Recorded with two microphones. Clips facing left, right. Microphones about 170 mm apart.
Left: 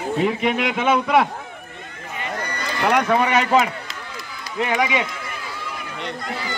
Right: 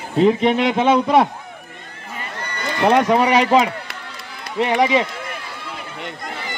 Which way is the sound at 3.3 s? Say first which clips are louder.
Right 3 dB; 30° right (ahead or behind).